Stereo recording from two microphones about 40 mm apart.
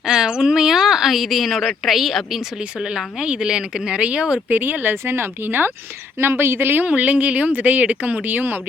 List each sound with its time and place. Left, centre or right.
0.0 s speech: centre
2.6 s speech: centre
4.4 s speech: right
6.1 s a woman's voice: right
6.8 s speech: right